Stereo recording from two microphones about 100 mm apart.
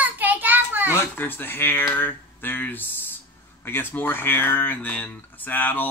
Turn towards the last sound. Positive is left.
turn(degrees=20)  # may be behind; listen again after turning